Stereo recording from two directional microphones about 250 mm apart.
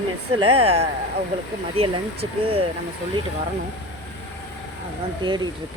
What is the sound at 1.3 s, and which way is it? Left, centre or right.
Speech, right.